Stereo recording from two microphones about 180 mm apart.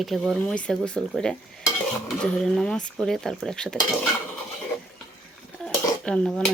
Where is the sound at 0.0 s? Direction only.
Centre (ahead or behind).